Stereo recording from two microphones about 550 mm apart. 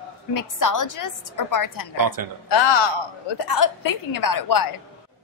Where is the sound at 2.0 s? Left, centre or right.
Right.